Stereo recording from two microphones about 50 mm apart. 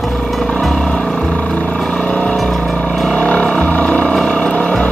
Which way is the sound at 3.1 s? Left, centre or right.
Centre.